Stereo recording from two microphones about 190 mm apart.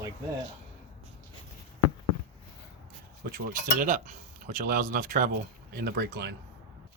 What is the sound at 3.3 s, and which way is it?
Speech, 45° right (ahead or behind).